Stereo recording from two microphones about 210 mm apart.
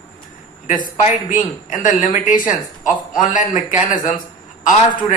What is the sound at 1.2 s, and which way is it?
Speech, 40° left (ahead or behind).